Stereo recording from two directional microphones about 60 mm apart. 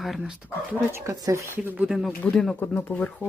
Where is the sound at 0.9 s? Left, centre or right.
Right.